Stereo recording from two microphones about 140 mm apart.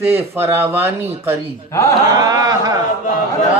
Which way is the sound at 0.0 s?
15° right (ahead or behind).